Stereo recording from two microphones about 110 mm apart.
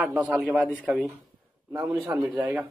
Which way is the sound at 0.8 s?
5° right (ahead or behind).